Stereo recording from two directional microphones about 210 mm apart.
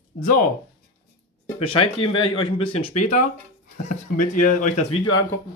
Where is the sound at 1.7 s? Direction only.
25° left (ahead or behind).